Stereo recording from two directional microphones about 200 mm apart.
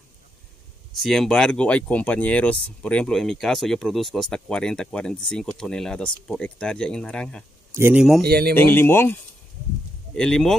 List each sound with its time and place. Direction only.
0.9 s speech: centre (ahead or behind)
7.7 s speech: 10° right (ahead or behind)
8.3 s speech: 50° right (ahead or behind)
8.5 s speech: 10° left (ahead or behind)
10.1 s speech: 5° left (ahead or behind)